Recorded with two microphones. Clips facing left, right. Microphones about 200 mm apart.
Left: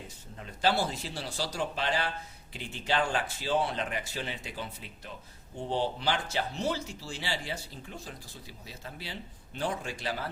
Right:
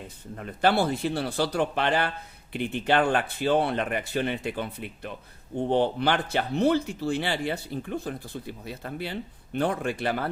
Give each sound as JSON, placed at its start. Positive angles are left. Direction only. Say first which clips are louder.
{"t": 0.3, "sound": "speech", "louder": "right 5 dB", "side_deg": -60}